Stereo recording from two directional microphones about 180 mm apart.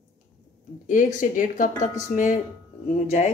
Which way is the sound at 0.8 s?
45° left (ahead or behind).